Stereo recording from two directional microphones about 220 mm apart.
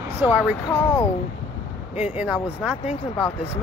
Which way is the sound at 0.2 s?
5° right (ahead or behind).